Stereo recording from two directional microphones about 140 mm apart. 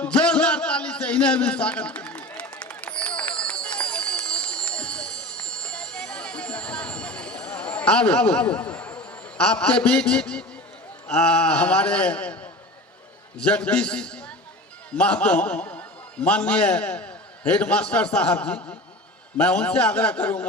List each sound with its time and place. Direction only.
0.0 s a sound: 10° left (ahead or behind)
3.2 s run: 10° left (ahead or behind)
9.4 s a man's voice: 10° left (ahead or behind)